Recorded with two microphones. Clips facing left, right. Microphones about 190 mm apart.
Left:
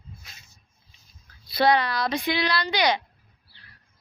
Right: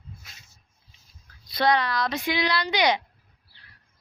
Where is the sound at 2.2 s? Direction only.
15° right (ahead or behind).